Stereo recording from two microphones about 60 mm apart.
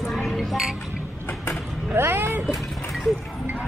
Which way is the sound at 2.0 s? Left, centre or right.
Right.